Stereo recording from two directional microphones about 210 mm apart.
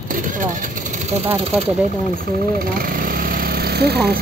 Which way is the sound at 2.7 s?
45° right (ahead or behind).